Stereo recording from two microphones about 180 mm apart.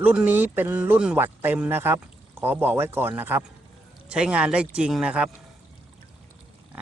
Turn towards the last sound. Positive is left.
turn(degrees=-5)  # may be behind; listen again after turning